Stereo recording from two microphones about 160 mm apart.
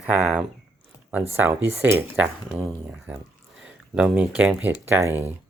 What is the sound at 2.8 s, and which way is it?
Speech, 5° right (ahead or behind).